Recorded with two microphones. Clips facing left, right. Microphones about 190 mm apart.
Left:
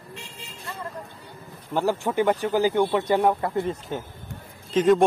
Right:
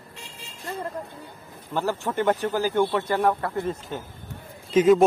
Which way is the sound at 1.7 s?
15° left (ahead or behind).